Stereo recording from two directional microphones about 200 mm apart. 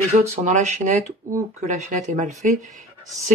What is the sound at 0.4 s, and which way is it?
Speech, 35° right (ahead or behind).